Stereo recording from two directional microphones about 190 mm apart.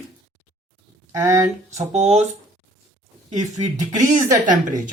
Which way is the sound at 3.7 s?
20° right (ahead or behind).